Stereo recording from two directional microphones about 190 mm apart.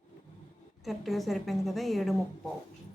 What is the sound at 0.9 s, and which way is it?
A woman's voice, centre (ahead or behind).